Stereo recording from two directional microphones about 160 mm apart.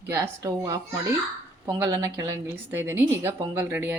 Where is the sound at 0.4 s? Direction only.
25° right (ahead or behind).